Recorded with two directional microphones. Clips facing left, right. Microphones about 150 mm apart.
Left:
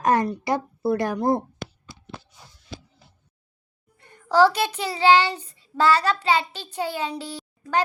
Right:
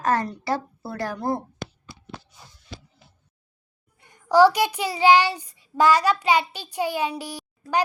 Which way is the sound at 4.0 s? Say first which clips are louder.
Right 2 dB; 10° right (ahead or behind).